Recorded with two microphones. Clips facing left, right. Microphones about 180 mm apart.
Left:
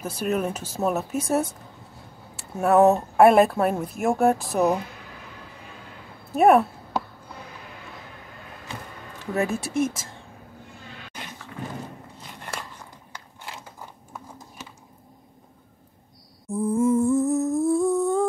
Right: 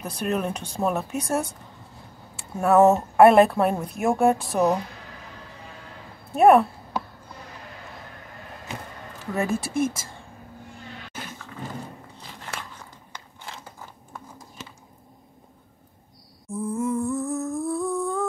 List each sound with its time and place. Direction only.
0.0 s speech: 5° left (ahead or behind)
6.3 s speech: centre (ahead or behind)
9.2 s speech: centre (ahead or behind)
16.4 s humming: 35° left (ahead or behind)